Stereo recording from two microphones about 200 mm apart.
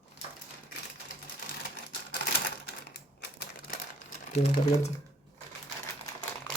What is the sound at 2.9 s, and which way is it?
Typewriter, 50° left (ahead or behind).